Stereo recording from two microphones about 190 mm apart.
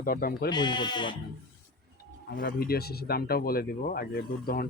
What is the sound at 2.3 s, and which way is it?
Speech, 50° left (ahead or behind).